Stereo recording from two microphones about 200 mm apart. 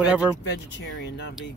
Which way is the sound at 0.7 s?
60° left (ahead or behind).